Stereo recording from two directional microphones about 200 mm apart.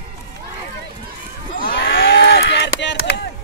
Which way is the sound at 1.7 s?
50° left (ahead or behind).